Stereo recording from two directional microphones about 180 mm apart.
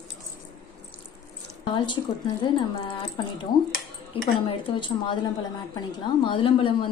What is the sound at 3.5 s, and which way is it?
A woman's voice, 25° left (ahead or behind).